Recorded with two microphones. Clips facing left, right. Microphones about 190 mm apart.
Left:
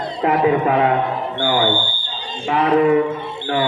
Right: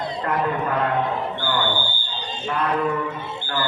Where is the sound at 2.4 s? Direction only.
90° left.